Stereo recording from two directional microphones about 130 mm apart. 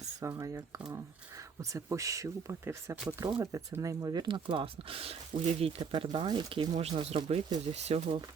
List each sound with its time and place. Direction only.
0.2 s speech: 25° right (ahead or behind)
1.7 s speech: 25° right (ahead or behind)
3.4 s speech: 25° right (ahead or behind); by 8.2 s 55° right (ahead or behind)